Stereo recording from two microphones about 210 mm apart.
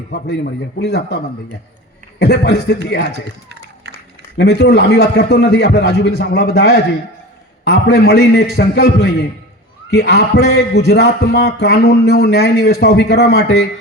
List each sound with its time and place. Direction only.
0.1 s a man's voice: 50° left (ahead or behind)
3.1 s a sound: 50° right (ahead or behind)
4.4 s a man's voice: 55° left (ahead or behind)